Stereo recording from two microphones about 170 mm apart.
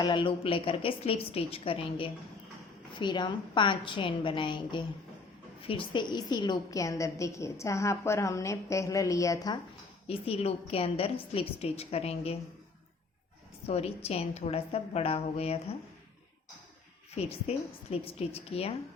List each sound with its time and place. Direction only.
0.0 s a woman's voice: 30° left (ahead or behind)
10.1 s a woman's voice: 35° left (ahead or behind)
13.7 s a woman's voice: 35° left (ahead or behind)
17.2 s a woman's voice: 35° left (ahead or behind)